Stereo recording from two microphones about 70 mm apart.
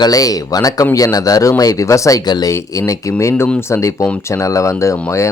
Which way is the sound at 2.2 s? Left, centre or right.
Left.